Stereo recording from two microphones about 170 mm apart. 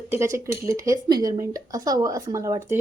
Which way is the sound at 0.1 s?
15° right (ahead or behind).